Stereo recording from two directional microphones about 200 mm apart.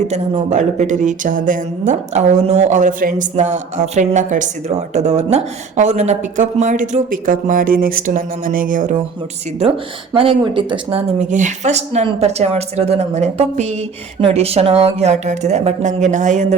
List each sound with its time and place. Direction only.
0.1 s speech: 35° right (ahead or behind)
10.2 s speech: 25° right (ahead or behind)